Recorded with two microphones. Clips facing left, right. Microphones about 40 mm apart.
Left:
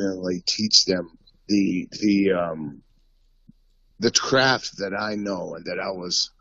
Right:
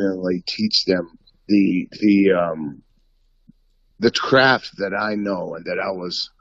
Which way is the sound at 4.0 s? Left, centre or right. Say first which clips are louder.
Right 5 dB; right.